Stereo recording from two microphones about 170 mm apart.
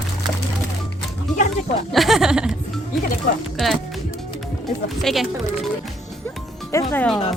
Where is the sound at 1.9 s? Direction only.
Centre (ahead or behind).